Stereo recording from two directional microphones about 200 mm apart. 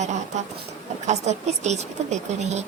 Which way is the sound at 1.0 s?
35° right (ahead or behind).